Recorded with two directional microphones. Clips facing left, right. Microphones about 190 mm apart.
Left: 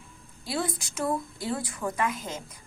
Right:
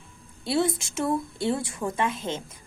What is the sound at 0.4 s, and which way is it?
A woman's voice, 25° right (ahead or behind).